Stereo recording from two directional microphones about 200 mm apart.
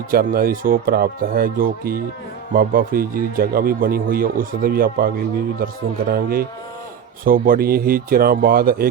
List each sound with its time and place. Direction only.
0.1 s speech: 45° right (ahead or behind)